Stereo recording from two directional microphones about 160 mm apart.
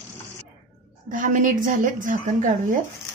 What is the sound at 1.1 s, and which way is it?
A woman's voice, 55° right (ahead or behind).